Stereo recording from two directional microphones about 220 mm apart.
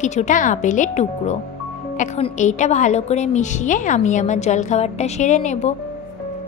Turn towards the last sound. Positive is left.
turn(degrees=30)  # may be behind; listen again after turning